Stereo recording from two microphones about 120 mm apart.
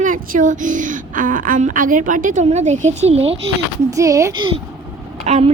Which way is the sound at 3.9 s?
25° right (ahead or behind).